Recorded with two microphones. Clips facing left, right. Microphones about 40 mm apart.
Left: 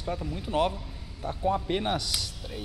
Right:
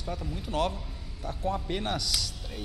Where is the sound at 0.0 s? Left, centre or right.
Centre.